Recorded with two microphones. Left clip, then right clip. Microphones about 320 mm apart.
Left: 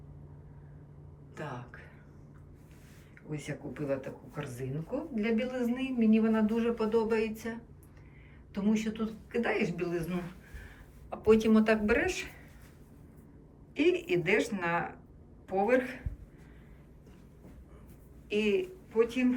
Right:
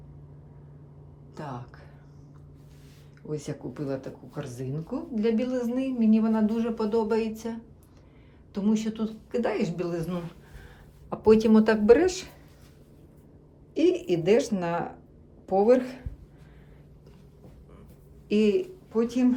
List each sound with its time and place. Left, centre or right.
3.3 s a woman's voice: centre
13.7 s a woman's voice: centre
18.3 s a woman's voice: centre